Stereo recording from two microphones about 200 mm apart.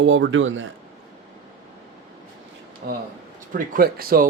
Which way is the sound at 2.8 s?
50° right (ahead or behind).